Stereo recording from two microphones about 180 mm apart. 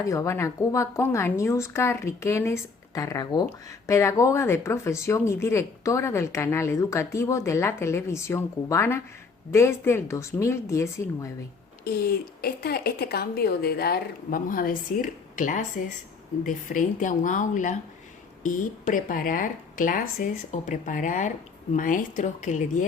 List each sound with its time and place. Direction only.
0.0 s speech: 15° left (ahead or behind)
11.9 s a woman's voice: 55° left (ahead or behind)